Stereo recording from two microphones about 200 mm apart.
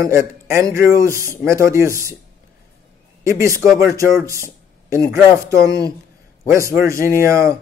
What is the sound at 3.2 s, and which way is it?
Speech, 15° right (ahead or behind).